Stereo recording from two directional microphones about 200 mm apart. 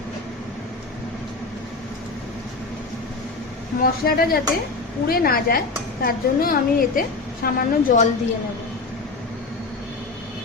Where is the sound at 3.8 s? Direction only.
50° left (ahead or behind).